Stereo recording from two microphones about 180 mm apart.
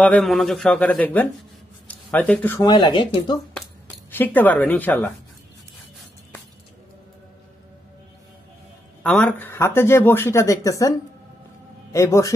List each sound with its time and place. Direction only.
0.0 s speech: 5° left (ahead or behind)
2.6 s speech: 25° left (ahead or behind)
4.1 s speech: 10° left (ahead or behind)
9.0 s speech: 5° left (ahead or behind)